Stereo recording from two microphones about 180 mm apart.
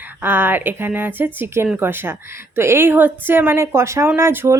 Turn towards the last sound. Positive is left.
turn(degrees=-15)  # may be behind; listen again after turning